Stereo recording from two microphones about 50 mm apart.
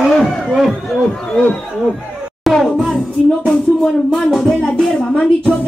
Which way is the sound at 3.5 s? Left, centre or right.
Centre.